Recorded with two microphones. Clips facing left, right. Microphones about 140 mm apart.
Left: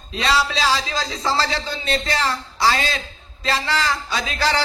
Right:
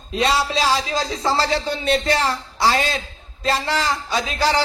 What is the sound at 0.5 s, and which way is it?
A man's voice, 45° right (ahead or behind).